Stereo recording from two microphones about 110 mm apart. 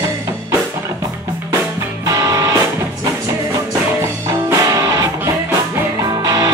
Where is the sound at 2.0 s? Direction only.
30° right (ahead or behind).